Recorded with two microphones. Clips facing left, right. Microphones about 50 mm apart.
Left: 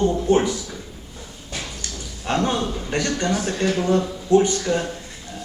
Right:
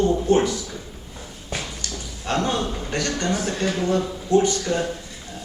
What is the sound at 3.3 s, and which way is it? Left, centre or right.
Speech, centre.